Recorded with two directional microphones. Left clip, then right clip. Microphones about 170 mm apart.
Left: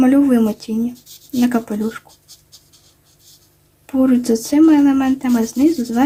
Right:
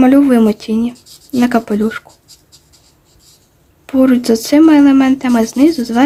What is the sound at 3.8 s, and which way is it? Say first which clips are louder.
Speech: right 5 dB; 35° right (ahead or behind).